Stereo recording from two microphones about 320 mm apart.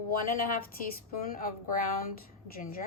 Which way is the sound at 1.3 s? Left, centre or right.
Left.